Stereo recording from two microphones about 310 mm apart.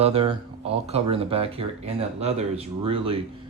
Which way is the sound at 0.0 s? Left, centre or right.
Centre.